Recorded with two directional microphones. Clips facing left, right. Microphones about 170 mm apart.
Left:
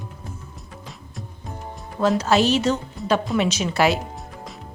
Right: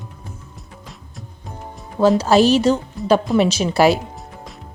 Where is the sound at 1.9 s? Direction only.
35° right (ahead or behind).